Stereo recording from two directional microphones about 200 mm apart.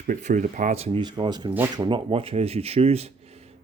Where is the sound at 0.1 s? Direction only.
40° right (ahead or behind).